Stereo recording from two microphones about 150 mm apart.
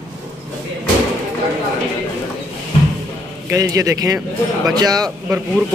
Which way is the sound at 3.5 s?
20° right (ahead or behind).